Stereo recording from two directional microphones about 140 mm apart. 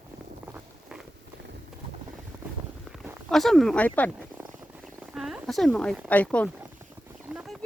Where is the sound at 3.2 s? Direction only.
Centre (ahead or behind).